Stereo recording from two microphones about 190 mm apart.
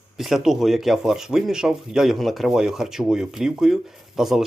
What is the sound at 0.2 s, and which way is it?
Speech, centre (ahead or behind).